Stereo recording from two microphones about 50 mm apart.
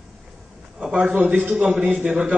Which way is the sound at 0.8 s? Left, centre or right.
Centre.